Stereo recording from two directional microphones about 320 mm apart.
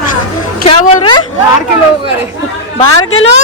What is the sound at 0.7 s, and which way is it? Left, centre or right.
Speech, centre.